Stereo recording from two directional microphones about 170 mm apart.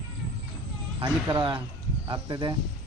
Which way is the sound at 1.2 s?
25° right (ahead or behind).